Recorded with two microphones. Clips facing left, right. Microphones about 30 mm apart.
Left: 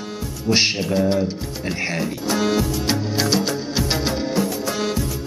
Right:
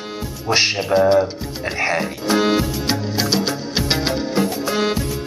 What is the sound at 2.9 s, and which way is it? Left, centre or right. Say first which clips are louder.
Music: even; centre.